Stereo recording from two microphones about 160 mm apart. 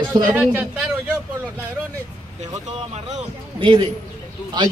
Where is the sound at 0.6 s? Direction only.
5° right (ahead or behind).